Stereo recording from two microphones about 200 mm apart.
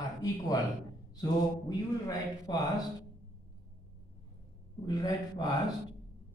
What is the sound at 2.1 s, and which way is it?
Speech, 20° left (ahead or behind).